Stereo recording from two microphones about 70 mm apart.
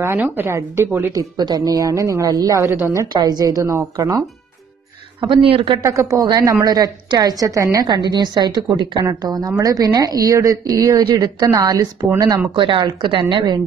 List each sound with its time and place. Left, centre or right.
0.0 s speech: right
1.3 s a woman's voice: right
2.2 s a woman's voice: right
3.1 s a woman's voice: right
5.8 s speech: right
6.4 s a woman's voice: right
7.8 s speech: right
9.2 s a woman's voice: right
11.4 s a woman's voice: right
12.2 s speech: right